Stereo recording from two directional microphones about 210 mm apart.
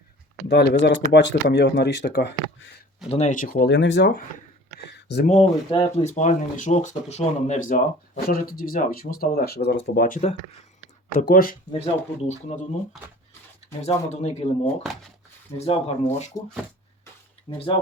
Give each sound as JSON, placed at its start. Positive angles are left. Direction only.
{"t": 0.4, "sound": "speech", "side_deg": 50}
{"t": 3.1, "sound": "speech", "side_deg": 35}
{"t": 4.9, "sound": "a sound", "side_deg": 50}
{"t": 5.2, "sound": "speech", "side_deg": 30}
{"t": 11.2, "sound": "speech", "side_deg": 40}
{"t": 13.8, "sound": "speech", "side_deg": 35}
{"t": 17.5, "sound": "speech", "side_deg": 25}